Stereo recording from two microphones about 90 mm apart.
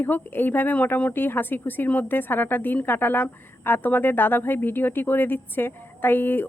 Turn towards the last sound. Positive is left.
turn(degrees=25)  # may be behind; listen again after turning